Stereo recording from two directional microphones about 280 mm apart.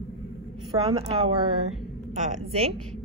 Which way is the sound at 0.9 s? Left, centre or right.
Centre.